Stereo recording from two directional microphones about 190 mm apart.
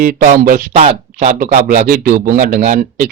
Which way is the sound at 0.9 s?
40° right (ahead or behind).